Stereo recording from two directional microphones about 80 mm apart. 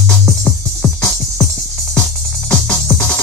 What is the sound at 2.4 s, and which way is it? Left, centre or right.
Music, centre.